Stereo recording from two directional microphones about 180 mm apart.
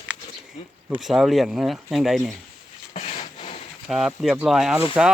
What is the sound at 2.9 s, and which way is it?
Wood, 40° left (ahead or behind).